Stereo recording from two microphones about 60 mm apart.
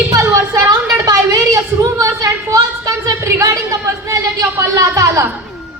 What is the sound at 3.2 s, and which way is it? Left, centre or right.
A woman's voice, right.